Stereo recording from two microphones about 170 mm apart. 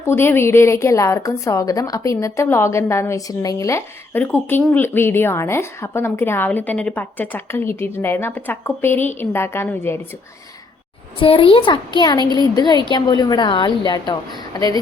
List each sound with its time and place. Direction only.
0.0 s a woman's voice: 15° left (ahead or behind)
11.2 s a woman's voice: 30° left (ahead or behind)
12.2 s speech: 25° right (ahead or behind)
12.5 s a woman's voice: 25° left (ahead or behind)